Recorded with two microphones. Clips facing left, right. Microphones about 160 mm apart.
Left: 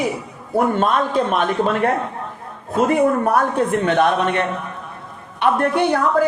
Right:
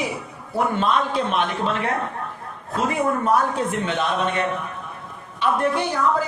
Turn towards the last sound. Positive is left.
turn(degrees=60)  # may be behind; listen again after turning